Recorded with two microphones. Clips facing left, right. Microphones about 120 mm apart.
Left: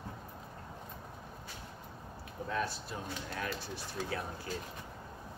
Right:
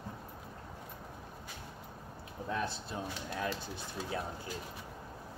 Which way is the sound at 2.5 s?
25° right (ahead or behind).